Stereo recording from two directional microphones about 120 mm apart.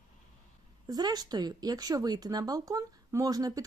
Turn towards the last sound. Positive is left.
turn(degrees=-30)  # may be behind; listen again after turning